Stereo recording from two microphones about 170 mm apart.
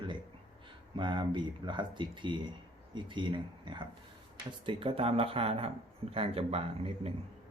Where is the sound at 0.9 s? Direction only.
30° right (ahead or behind).